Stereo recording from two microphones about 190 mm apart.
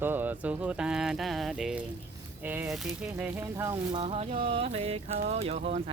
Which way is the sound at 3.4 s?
15° right (ahead or behind).